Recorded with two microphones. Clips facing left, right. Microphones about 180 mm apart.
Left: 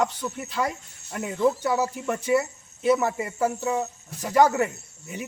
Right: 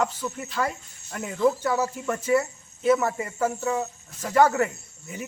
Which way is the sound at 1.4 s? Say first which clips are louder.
Even; 15° left (ahead or behind).